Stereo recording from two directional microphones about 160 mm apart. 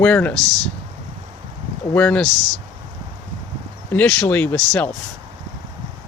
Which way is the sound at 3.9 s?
10° left (ahead or behind).